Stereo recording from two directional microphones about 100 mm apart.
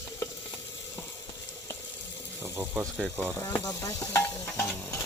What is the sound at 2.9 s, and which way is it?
Speech, 15° right (ahead or behind).